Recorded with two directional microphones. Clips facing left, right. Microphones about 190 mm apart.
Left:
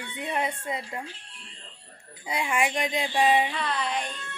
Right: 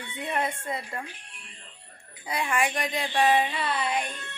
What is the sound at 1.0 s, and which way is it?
Music, 15° right (ahead or behind).